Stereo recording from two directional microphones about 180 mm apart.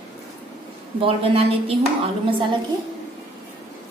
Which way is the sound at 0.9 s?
30° right (ahead or behind).